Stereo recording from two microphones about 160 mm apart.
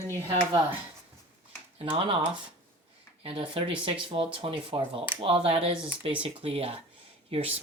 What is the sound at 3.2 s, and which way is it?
Speech, 40° right (ahead or behind).